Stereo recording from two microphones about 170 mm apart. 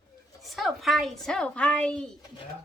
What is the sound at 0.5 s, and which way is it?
A woman's voice, centre (ahead or behind).